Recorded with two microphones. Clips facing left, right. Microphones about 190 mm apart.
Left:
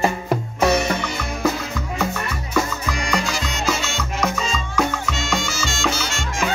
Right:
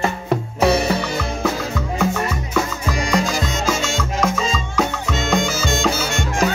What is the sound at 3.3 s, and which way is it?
Music, 45° right (ahead or behind).